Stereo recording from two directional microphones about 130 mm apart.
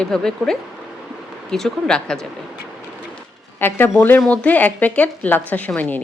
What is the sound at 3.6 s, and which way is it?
A woman's voice, 15° left (ahead or behind).